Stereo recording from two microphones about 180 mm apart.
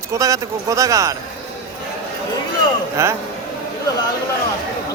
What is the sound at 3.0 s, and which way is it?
Speech, 15° right (ahead or behind).